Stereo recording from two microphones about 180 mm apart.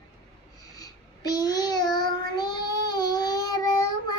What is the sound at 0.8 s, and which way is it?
Child singing, 20° left (ahead or behind).